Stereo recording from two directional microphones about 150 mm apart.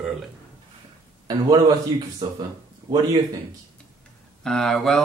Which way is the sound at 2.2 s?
25° right (ahead or behind).